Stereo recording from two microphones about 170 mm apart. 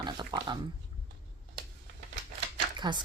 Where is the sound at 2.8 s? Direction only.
25° right (ahead or behind).